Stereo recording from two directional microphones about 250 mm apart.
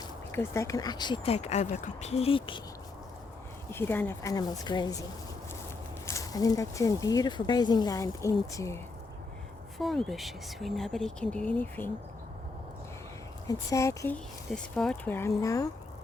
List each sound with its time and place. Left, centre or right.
0.0 s speech: centre
3.7 s speech: centre
6.1 s speech: centre
9.7 s speech: centre
13.5 s speech: centre